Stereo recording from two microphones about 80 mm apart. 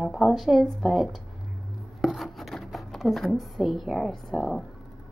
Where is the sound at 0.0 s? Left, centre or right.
Centre.